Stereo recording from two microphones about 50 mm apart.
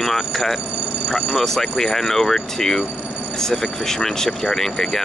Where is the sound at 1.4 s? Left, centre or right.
Centre.